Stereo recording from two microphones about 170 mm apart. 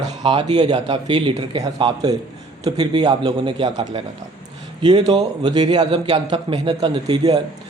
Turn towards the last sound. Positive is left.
turn(degrees=-25)  # may be behind; listen again after turning